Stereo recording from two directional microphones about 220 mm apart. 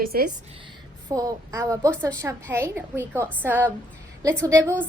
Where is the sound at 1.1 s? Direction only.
15° right (ahead or behind).